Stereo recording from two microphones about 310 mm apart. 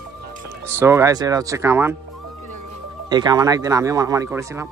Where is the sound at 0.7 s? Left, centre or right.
Centre.